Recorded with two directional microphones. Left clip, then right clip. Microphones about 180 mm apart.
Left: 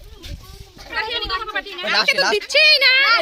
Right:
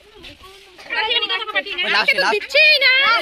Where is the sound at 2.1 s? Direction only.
5° left (ahead or behind).